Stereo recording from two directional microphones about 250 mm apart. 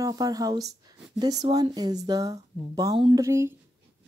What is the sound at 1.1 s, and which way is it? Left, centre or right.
Speech, centre.